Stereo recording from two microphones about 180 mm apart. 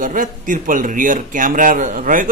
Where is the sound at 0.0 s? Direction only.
50° right (ahead or behind).